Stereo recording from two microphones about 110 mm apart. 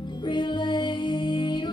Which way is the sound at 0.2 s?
45° left (ahead or behind).